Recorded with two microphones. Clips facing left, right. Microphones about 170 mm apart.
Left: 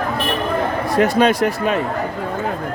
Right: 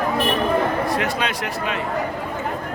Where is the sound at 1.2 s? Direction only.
45° left (ahead or behind).